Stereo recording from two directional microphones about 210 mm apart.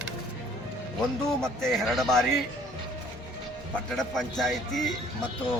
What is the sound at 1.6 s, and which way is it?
Speech, centre (ahead or behind).